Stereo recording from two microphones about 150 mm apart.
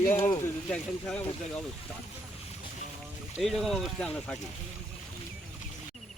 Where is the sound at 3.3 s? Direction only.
Centre (ahead or behind).